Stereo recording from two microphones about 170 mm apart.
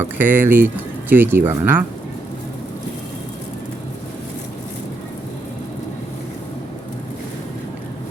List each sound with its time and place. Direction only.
0.0 s speech: 10° right (ahead or behind)